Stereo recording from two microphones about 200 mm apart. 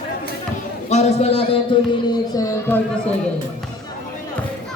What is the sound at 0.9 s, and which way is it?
Speech, 35° left (ahead or behind).